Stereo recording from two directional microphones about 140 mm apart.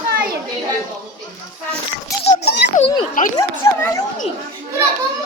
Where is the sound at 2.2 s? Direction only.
60° left (ahead or behind).